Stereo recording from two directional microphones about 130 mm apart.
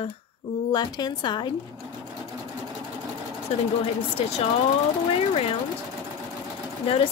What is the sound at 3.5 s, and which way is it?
Speech, 55° left (ahead or behind).